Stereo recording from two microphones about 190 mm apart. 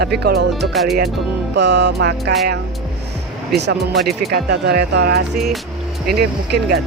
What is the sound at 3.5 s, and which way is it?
Speech, 65° right (ahead or behind).